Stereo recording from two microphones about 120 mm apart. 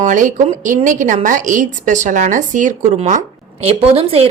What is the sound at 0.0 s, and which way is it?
A woman's voice, 90° right.